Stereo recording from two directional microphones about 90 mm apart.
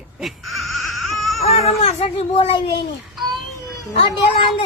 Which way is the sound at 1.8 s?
85° left.